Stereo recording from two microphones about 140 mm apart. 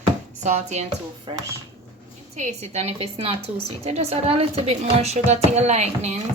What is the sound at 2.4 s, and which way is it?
A woman's voice, 55° right (ahead or behind).